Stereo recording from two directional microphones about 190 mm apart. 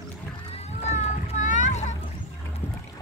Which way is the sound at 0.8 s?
40° left (ahead or behind).